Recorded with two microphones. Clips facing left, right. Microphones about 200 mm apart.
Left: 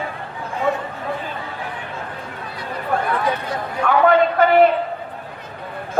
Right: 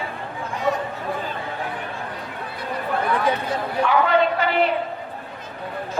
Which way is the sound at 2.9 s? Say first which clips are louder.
Left 1 dB; 50° left (ahead or behind).